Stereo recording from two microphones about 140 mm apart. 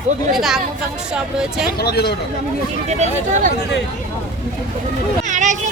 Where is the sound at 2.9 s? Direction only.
55° right (ahead or behind).